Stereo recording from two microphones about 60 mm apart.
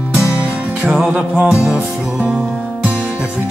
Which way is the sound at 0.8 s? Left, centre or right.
Centre.